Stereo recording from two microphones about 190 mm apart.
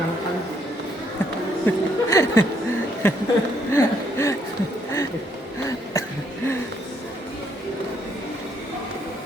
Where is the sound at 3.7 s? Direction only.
15° left (ahead or behind).